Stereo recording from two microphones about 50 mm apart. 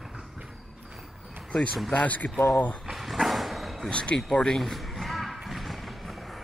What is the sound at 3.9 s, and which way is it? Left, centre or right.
Speech, left.